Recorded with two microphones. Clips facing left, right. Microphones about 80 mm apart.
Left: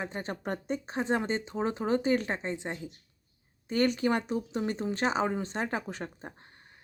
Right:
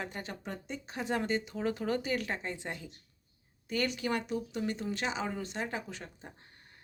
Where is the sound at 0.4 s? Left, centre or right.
Left.